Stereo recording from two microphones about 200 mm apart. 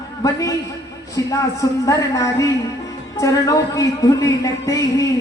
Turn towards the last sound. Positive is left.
turn(degrees=15)  # may be behind; listen again after turning